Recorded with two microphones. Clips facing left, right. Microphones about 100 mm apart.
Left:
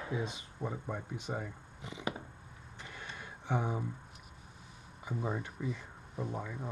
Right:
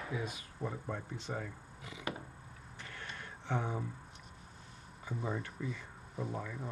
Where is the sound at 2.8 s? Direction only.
15° left (ahead or behind).